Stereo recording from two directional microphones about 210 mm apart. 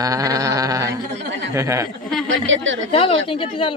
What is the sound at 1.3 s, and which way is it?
Speech, 60° right (ahead or behind).